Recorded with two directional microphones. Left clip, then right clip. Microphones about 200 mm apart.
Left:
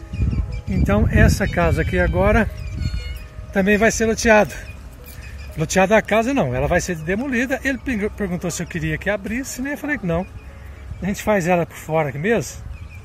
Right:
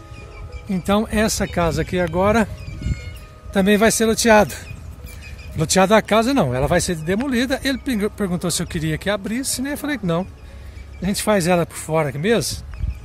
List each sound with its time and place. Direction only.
0.7 s speech: 20° right (ahead or behind)
3.5 s speech: 30° right (ahead or behind)
5.6 s speech: 30° right (ahead or behind)
8.0 s speech: 20° right (ahead or behind)
8.4 s speech: 35° right (ahead or behind)
9.3 s speech: 90° right
9.9 s speech: 25° right (ahead or behind)